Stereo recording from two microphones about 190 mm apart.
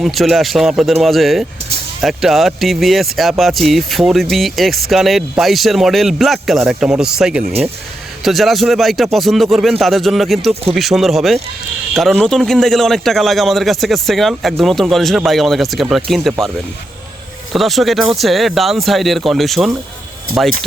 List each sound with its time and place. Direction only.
0.0 s a man's voice: centre (ahead or behind)
10.5 s speech: 30° right (ahead or behind)
10.8 s a man's voice: centre (ahead or behind)
17.5 s a man's voice: centre (ahead or behind)